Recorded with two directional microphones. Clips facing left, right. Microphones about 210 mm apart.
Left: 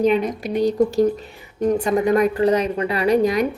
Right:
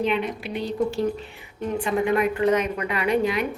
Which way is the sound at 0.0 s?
40° left (ahead or behind).